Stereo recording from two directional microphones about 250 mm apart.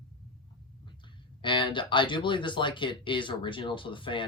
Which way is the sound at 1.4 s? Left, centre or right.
Centre.